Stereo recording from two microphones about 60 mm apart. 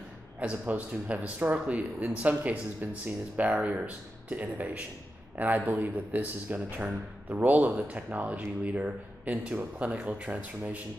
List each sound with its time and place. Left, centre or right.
0.4 s speech: right